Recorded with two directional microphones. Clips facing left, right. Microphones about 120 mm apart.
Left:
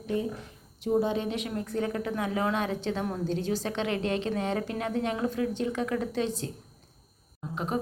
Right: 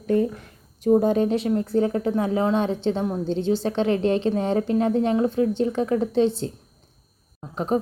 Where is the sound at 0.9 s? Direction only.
45° right (ahead or behind); by 6.5 s 30° right (ahead or behind).